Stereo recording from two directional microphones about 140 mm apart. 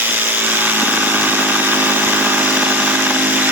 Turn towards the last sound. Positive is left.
turn(degrees=-10)  # may be behind; listen again after turning